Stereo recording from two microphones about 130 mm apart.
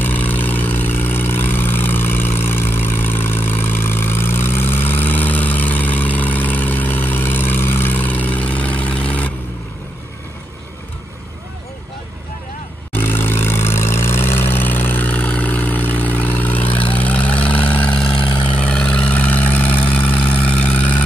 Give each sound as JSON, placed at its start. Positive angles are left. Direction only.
{"t": 0.0, "sound": "vehicle", "side_deg": 15}
{"t": 13.0, "sound": "vehicle", "side_deg": 20}
{"t": 18.0, "sound": "vehicle", "side_deg": 40}
{"t": 18.6, "sound": "vehicle", "side_deg": 10}